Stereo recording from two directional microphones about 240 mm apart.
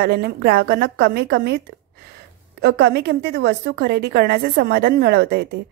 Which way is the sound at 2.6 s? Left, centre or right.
Right.